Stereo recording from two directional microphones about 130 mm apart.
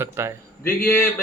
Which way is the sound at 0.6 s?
15° left (ahead or behind).